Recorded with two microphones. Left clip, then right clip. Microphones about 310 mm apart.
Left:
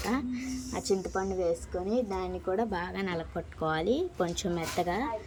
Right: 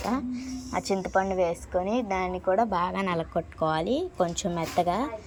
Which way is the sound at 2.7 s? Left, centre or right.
Centre.